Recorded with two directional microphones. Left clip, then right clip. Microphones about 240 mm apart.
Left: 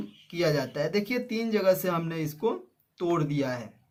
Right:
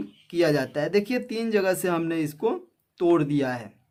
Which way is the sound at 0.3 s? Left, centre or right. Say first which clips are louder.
Right 4 dB; right.